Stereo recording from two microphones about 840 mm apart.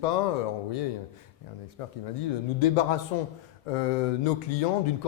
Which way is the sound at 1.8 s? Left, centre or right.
Left.